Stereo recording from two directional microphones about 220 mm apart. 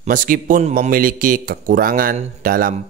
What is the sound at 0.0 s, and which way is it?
A man's voice, 40° right (ahead or behind).